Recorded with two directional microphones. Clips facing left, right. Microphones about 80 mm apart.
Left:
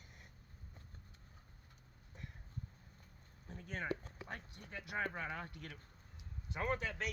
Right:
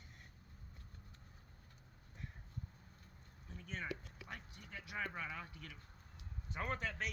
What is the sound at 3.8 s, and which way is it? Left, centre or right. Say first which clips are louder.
Speech: left 6 dB; left.